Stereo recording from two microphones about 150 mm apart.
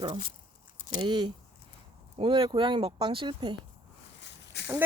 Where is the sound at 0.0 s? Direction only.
35° right (ahead or behind).